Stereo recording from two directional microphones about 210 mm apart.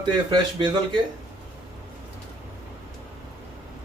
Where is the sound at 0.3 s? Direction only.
20° right (ahead or behind).